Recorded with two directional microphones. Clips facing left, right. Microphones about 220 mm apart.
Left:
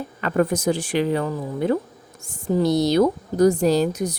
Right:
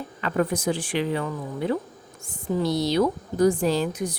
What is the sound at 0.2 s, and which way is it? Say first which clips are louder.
A woman's voice: left 4 dB; 50° left (ahead or behind).